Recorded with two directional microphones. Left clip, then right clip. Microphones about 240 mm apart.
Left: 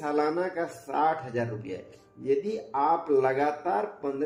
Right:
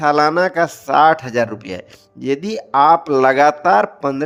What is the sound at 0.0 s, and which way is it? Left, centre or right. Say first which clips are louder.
A man's voice: right 14 dB; right.